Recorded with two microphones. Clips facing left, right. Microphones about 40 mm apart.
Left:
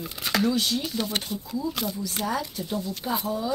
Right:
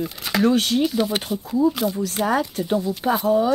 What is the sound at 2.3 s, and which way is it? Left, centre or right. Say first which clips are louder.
Speech: right 9 dB; right.